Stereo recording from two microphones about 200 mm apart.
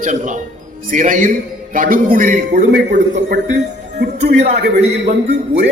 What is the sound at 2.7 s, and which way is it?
Speech, 60° right (ahead or behind).